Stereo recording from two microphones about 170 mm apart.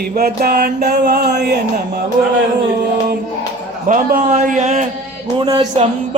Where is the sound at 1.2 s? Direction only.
75° right (ahead or behind).